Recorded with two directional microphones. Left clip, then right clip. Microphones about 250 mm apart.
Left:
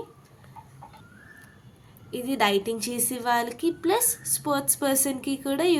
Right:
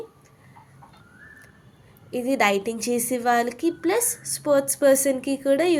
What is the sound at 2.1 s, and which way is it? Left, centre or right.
A woman's voice, centre.